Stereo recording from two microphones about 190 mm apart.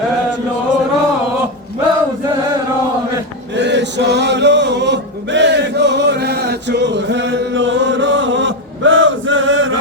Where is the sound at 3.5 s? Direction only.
65° right (ahead or behind); by 9.7 s 90° right.